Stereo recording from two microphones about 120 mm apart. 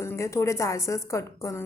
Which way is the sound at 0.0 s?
25° left (ahead or behind).